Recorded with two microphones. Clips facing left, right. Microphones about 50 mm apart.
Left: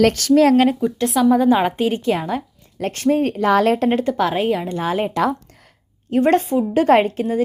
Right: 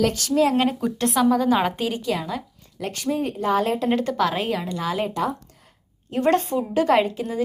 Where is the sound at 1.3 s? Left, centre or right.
Centre.